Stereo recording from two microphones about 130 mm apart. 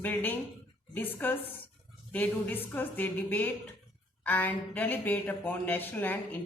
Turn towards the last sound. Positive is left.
turn(degrees=15)  # may be behind; listen again after turning